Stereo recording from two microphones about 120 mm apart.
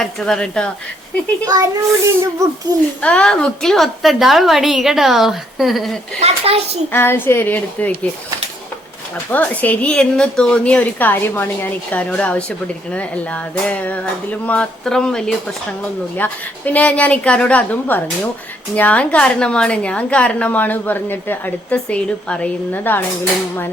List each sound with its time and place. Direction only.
0.0 s a woman's voice: 5° left (ahead or behind)
1.5 s a child's voice: 30° right (ahead or behind)
3.0 s a woman's voice: 10° left (ahead or behind)
6.1 s a child's voice: 55° right (ahead or behind)
6.9 s a woman's voice: 20° left (ahead or behind)
9.3 s a woman's voice: 10° left (ahead or behind)